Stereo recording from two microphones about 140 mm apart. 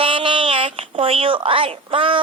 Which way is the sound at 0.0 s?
40° right (ahead or behind).